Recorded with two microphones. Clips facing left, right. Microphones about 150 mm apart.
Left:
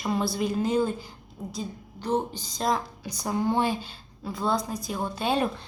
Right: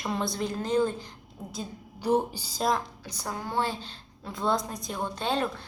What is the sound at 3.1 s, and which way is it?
A woman's voice, 15° left (ahead or behind).